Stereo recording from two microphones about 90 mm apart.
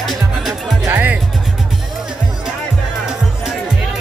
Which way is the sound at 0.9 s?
20° right (ahead or behind).